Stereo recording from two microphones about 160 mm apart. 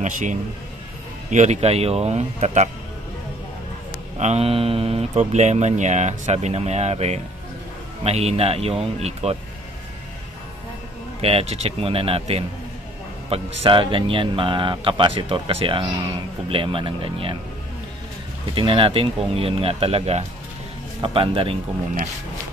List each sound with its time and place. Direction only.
0.0 s speech: 50° right (ahead or behind)
4.2 s speech: 40° right (ahead or behind)
11.1 s speech: 40° right (ahead or behind)
18.5 s speech: 35° right (ahead or behind)